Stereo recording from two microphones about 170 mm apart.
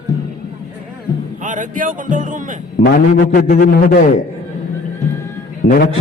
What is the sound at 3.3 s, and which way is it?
Speech, 65° left (ahead or behind).